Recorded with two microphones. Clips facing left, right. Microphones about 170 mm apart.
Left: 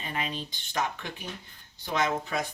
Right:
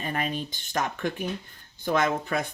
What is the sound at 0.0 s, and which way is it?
Speech, 50° right (ahead or behind).